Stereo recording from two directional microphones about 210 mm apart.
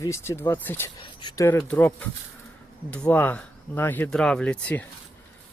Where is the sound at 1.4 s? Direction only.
5° left (ahead or behind).